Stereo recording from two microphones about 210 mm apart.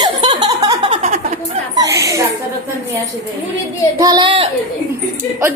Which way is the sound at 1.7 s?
15° right (ahead or behind).